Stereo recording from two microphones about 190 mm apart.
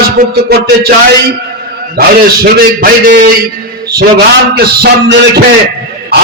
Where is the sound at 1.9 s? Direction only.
50° right (ahead or behind).